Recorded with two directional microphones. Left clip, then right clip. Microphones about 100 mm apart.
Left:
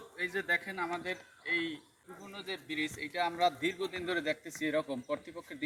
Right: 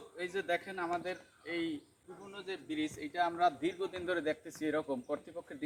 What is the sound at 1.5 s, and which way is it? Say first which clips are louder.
Speech: left 5 dB; 50° right (ahead or behind).